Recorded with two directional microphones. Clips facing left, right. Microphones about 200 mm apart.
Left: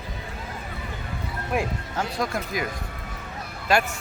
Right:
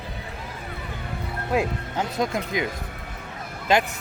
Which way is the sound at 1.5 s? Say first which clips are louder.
Right 3 dB; 20° right (ahead or behind).